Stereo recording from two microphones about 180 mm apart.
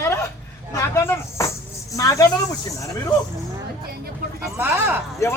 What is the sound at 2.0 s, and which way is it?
Cricket, 20° left (ahead or behind).